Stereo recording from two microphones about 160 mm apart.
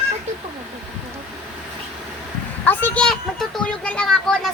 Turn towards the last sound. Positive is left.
turn(degrees=5)  # may be behind; listen again after turning